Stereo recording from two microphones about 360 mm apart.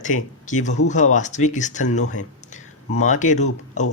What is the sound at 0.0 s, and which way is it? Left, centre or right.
Speech, left.